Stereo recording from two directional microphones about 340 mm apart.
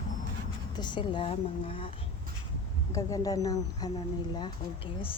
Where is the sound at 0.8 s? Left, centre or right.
Centre.